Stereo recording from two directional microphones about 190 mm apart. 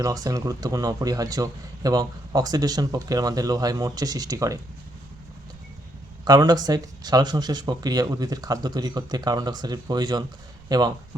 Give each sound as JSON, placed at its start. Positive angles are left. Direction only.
{"t": 0.0, "sound": "speech", "side_deg": -20}
{"t": 6.2, "sound": "speech", "side_deg": -20}